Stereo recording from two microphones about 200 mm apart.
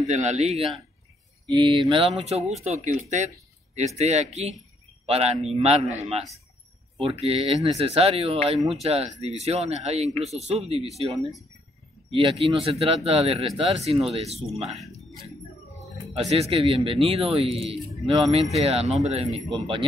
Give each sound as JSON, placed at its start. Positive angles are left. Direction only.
{"t": 0.0, "sound": "speech", "side_deg": -35}
{"t": 16.1, "sound": "speech", "side_deg": -30}